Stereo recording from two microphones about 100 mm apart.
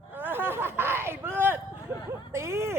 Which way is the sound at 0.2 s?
20° right (ahead or behind).